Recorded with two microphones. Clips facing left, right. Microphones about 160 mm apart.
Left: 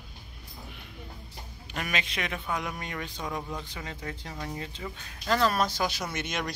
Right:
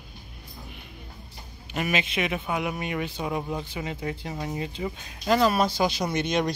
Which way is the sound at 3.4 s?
25° right (ahead or behind).